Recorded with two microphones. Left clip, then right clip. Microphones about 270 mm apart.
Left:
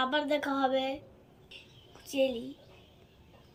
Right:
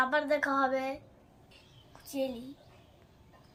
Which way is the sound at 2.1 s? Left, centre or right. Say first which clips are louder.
Left 6 dB; right.